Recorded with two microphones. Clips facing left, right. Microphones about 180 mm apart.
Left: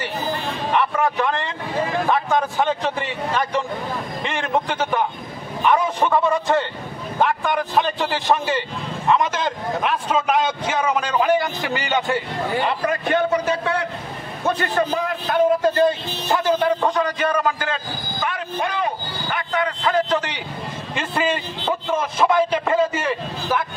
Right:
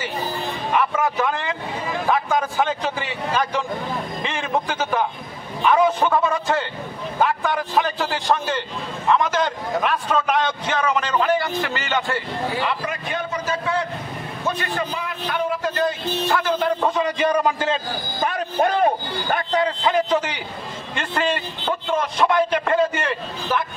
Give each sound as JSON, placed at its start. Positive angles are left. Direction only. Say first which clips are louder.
{"t": 0.7, "sound": "a man's voice", "louder": "even", "side_deg": -5}
{"t": 12.8, "sound": "a man's voice", "louder": "left 7 dB", "side_deg": 65}
{"t": 14.8, "sound": "a man's voice", "louder": "left 6 dB", "side_deg": 40}
{"t": 16.8, "sound": "a man's voice", "louder": "even", "side_deg": -10}
{"t": 18.2, "sound": "a man's voice", "louder": "right 5 dB", "side_deg": -45}
{"t": 19.5, "sound": "a man's voice", "louder": "right 1 dB", "side_deg": -30}
{"t": 19.9, "sound": "a man's voice", "louder": "left 2 dB", "side_deg": -10}
{"t": 20.9, "sound": "a man's voice", "louder": "left 1 dB", "side_deg": 5}